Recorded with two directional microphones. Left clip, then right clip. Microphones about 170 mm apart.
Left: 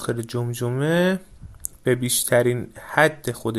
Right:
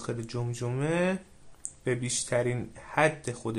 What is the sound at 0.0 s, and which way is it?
Speech, 35° left (ahead or behind).